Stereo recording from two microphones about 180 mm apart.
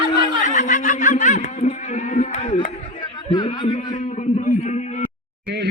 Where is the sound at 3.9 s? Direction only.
40° left (ahead or behind).